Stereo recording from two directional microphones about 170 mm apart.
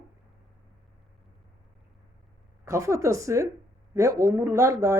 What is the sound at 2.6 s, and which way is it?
Speech, 15° right (ahead or behind).